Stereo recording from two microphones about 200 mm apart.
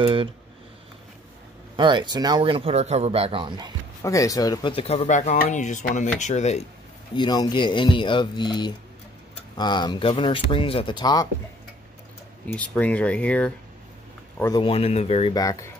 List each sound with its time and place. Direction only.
0.0 s speech: 25° right (ahead or behind)
1.8 s speech: 25° right (ahead or behind)
4.0 s speech: 15° left (ahead or behind); by 6.7 s 35° left (ahead or behind)
7.2 s speech: 20° left (ahead or behind)
12.4 s speech: 5° left (ahead or behind)
14.4 s speech: 20° left (ahead or behind)